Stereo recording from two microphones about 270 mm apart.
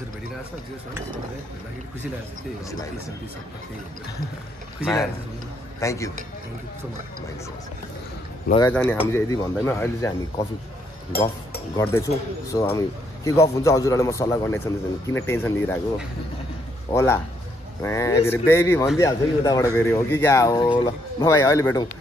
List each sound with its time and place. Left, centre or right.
5.8 s a man's voice: centre
8.5 s a man's voice: centre
11.1 s speech: left
11.7 s a man's voice: centre
16.9 s a man's voice: centre